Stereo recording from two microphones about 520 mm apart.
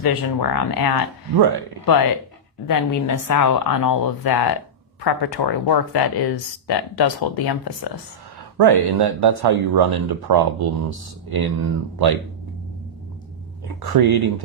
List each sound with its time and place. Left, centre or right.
0.0 s a woman's voice: left
8.5 s speech: right
13.8 s speech: right